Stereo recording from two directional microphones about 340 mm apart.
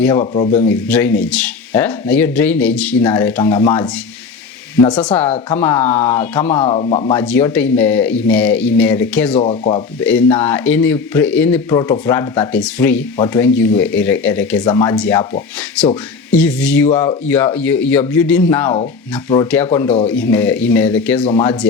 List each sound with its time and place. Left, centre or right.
0.0 s speech: centre
0.7 s speech: centre
9.4 s speech: centre
10.0 s speech: centre